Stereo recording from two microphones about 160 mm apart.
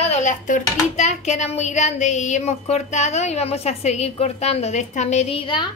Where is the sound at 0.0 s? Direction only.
45° left (ahead or behind).